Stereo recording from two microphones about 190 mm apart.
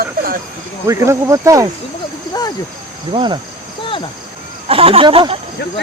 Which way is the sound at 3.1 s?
25° right (ahead or behind).